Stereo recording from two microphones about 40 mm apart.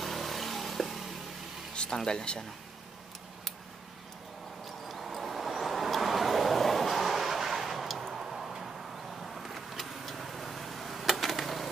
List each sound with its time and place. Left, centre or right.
0.0 s vehicle: centre
2.0 s speech: centre
4.6 s vehicle: centre